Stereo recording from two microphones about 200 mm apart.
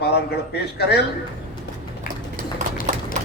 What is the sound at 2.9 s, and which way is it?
Clip-clop, 35° right (ahead or behind).